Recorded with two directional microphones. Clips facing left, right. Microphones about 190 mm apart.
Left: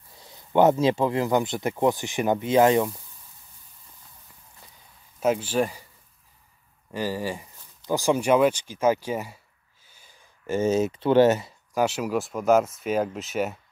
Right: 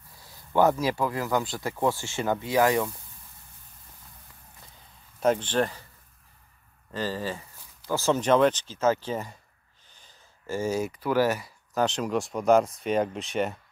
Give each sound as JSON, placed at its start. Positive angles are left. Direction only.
{"t": 0.2, "sound": "speech", "side_deg": 20}
{"t": 5.2, "sound": "speech", "side_deg": 5}
{"t": 6.9, "sound": "speech", "side_deg": 15}
{"t": 11.7, "sound": "speech", "side_deg": 10}